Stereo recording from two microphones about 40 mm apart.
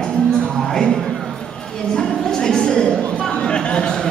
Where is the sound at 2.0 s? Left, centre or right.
Centre.